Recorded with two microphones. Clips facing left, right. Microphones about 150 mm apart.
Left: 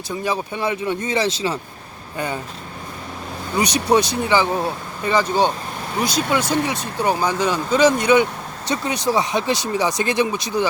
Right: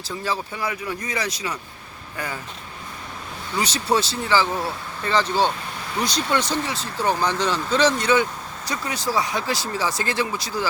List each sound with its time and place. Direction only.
0.3 s speech: 25° left (ahead or behind)
3.6 s speech: 15° left (ahead or behind)